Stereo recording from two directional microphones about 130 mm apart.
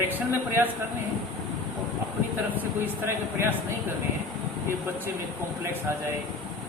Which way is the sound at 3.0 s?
20° right (ahead or behind).